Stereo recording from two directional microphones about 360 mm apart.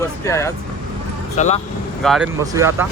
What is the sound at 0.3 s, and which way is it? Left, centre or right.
Speech, centre.